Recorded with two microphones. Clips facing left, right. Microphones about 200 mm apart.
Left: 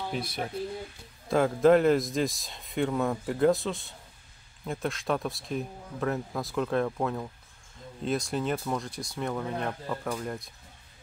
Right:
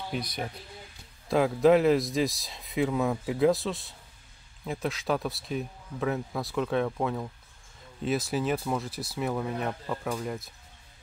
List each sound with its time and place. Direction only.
0.1 s speech: centre (ahead or behind)